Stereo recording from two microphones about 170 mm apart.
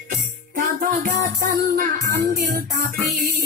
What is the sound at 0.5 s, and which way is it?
Music, 55° right (ahead or behind).